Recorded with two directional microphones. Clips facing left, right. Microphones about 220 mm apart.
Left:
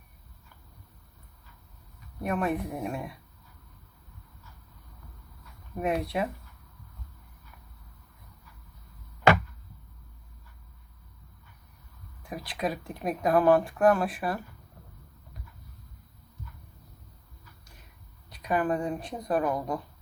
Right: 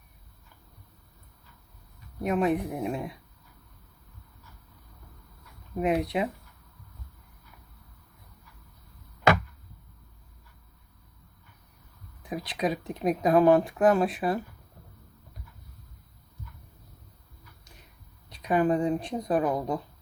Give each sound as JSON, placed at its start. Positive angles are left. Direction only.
{"t": 2.2, "sound": "speech", "side_deg": -15}
{"t": 5.7, "sound": "speech", "side_deg": -15}
{"t": 12.5, "sound": "speech", "side_deg": -20}
{"t": 18.3, "sound": "speech", "side_deg": -20}